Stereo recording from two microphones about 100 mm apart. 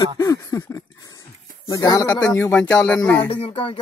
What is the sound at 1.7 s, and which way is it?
Speech, 35° left (ahead or behind).